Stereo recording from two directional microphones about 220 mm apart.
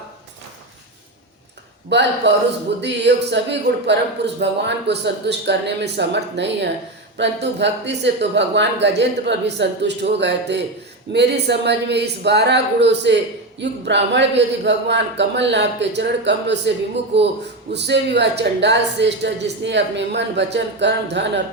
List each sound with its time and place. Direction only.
1.9 s speech: 50° right (ahead or behind)